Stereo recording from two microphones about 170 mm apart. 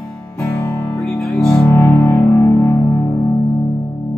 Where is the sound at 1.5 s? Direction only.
15° left (ahead or behind).